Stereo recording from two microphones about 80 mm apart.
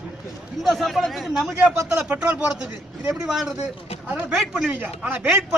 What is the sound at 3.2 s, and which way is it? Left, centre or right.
Speech, centre.